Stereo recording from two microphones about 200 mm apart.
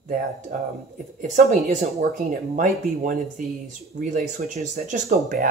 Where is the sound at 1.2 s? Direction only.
35° right (ahead or behind).